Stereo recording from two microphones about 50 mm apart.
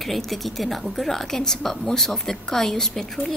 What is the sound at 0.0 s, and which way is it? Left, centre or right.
A woman's voice, centre.